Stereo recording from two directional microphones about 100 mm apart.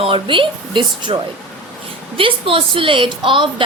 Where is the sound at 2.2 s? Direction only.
60° right (ahead or behind).